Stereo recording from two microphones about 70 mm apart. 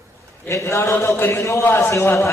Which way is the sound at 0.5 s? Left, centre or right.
Left.